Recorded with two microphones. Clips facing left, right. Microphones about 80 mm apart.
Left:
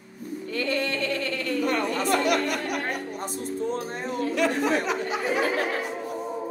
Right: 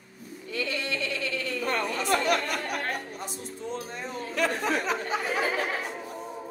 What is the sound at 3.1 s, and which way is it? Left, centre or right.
A woman's voice, left.